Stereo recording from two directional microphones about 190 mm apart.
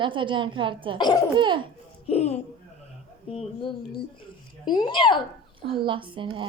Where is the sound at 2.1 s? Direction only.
35° left (ahead or behind).